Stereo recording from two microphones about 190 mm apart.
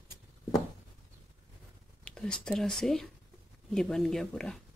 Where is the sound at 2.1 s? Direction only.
5° left (ahead or behind).